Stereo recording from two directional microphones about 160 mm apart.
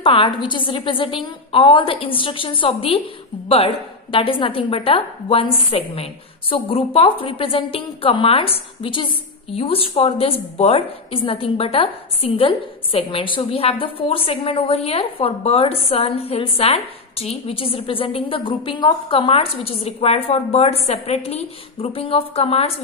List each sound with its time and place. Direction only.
0.0 s a woman's voice: 35° left (ahead or behind)